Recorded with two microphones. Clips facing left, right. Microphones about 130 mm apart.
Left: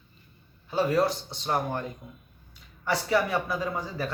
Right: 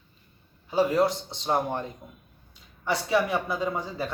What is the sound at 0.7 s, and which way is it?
A man's voice, 20° right (ahead or behind).